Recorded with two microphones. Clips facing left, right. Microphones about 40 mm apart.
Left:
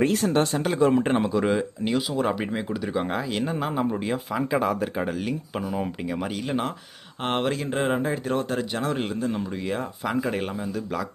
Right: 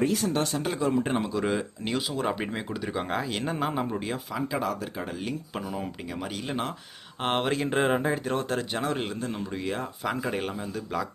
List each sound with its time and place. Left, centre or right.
0.0 s speech: left
0.8 s speech: left
1.0 s speech: centre
4.3 s speech: left
5.2 s speech: centre